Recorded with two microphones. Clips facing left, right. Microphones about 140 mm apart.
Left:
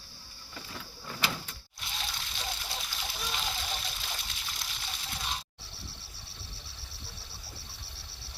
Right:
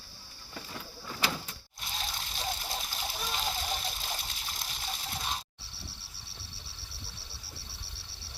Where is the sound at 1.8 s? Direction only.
40° right (ahead or behind).